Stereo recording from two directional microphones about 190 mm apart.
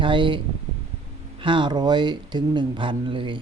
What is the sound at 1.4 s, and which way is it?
Speech, 25° right (ahead or behind).